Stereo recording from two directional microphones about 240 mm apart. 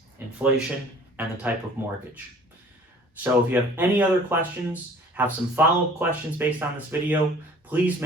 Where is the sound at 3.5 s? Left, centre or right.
Centre.